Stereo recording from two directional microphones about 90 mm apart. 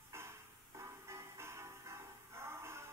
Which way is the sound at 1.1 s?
30° right (ahead or behind).